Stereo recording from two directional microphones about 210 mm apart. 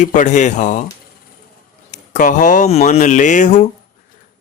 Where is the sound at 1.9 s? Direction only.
35° left (ahead or behind).